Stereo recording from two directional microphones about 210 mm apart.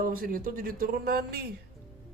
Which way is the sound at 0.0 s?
40° right (ahead or behind).